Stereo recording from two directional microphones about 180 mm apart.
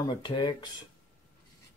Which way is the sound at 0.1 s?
25° left (ahead or behind).